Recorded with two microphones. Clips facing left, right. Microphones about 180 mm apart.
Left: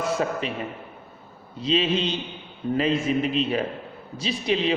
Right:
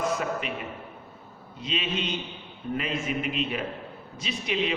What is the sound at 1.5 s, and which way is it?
A man's voice, 30° left (ahead or behind).